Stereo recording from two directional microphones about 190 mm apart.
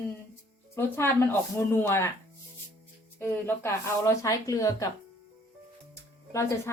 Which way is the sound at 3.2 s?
15° left (ahead or behind).